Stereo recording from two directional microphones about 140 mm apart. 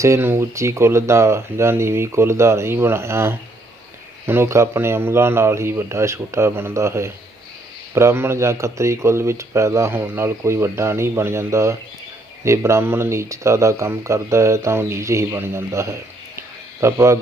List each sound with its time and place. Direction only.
0.0 s speech: 20° right (ahead or behind)